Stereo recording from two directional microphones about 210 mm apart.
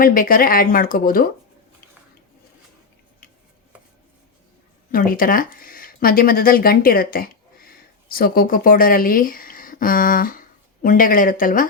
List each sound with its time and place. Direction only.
0.0 s speech: 45° left (ahead or behind)
4.9 s speech: 40° left (ahead or behind)